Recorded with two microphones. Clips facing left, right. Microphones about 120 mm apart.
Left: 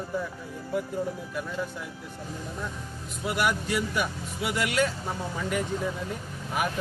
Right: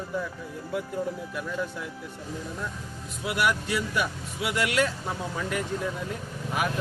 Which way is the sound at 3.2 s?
Centre (ahead or behind).